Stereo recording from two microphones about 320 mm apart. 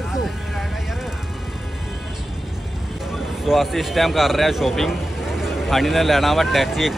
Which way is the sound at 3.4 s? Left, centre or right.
Centre.